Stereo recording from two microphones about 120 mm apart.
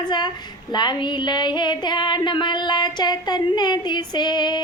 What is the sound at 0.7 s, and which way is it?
Female singing, 35° left (ahead or behind).